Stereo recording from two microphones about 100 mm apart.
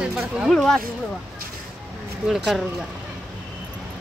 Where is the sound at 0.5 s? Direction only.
5° left (ahead or behind).